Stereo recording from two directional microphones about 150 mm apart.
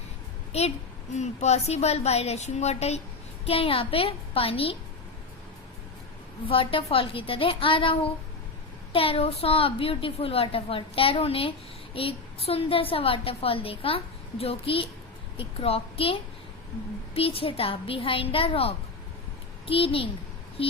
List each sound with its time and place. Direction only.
1.1 s a woman's voice: 50° left (ahead or behind)
6.5 s a woman's voice: 35° left (ahead or behind)
17.2 s a woman's voice: 40° left (ahead or behind)